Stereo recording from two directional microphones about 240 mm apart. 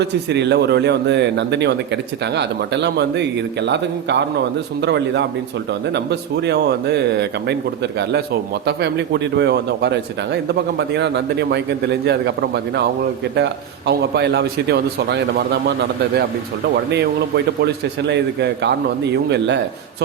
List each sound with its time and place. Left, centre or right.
0.0 s speech: right
16.9 s speech: right